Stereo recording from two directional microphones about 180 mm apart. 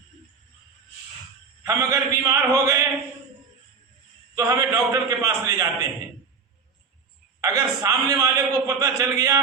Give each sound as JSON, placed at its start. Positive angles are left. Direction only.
{"t": 1.6, "sound": "a man's voice", "side_deg": -15}
{"t": 4.4, "sound": "a man's voice", "side_deg": -20}
{"t": 7.4, "sound": "a man's voice", "side_deg": -20}